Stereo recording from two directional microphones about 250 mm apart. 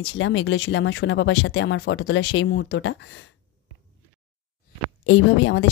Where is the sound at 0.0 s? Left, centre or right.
Left.